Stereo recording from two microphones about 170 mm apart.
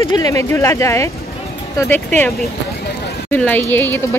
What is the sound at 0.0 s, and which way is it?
A woman's voice, 25° left (ahead or behind).